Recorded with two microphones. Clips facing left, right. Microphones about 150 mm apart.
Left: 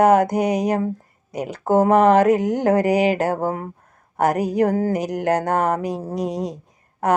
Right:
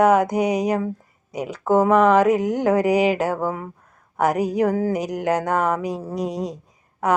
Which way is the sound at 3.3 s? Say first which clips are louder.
Left 2 dB; 45° left (ahead or behind).